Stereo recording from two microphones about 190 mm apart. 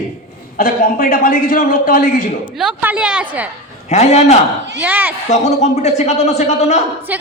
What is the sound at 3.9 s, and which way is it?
Speech, 35° left (ahead or behind).